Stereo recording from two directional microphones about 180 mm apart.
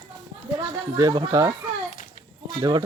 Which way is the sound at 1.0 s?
20° right (ahead or behind).